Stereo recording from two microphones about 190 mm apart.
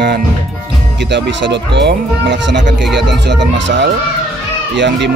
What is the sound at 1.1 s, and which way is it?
Speech, 65° right (ahead or behind).